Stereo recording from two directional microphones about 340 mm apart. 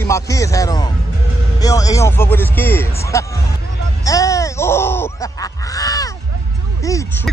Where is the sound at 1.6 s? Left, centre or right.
Centre.